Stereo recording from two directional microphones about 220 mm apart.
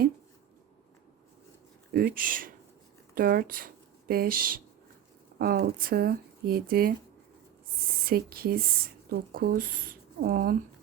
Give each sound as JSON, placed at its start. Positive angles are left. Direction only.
{"t": 1.9, "sound": "speech", "side_deg": -45}
{"t": 8.0, "sound": "speech", "side_deg": -45}